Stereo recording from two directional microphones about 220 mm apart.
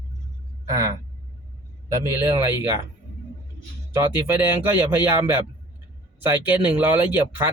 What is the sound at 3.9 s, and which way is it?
Speech, 10° right (ahead or behind).